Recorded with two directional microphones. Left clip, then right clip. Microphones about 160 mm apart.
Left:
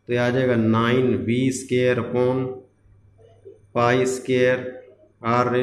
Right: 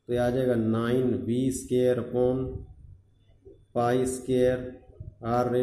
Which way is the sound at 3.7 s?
15° right (ahead or behind).